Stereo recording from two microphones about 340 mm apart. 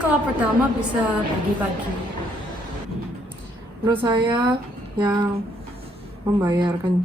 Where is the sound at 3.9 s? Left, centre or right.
Centre.